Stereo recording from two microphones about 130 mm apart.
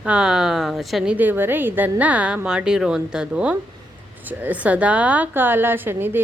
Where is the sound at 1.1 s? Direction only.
15° right (ahead or behind).